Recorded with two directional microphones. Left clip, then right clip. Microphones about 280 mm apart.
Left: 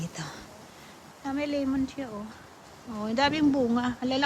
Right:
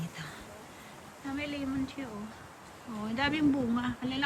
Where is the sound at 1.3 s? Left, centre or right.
Centre.